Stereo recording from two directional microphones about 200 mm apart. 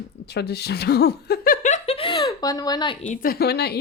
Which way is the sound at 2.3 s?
20° left (ahead or behind).